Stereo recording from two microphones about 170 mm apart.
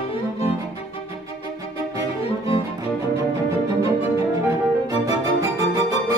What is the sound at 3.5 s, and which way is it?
Music, 20° right (ahead or behind).